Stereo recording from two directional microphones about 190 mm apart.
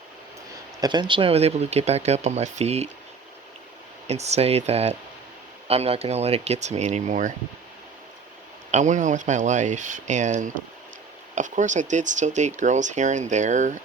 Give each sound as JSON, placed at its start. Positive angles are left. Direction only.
{"t": 0.8, "sound": "speech", "side_deg": -25}
{"t": 4.0, "sound": "speech", "side_deg": -35}
{"t": 8.7, "sound": "speech", "side_deg": -40}